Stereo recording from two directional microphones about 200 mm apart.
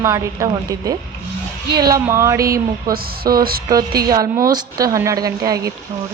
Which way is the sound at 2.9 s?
50° right (ahead or behind).